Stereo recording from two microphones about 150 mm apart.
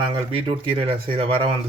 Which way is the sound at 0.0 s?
35° right (ahead or behind).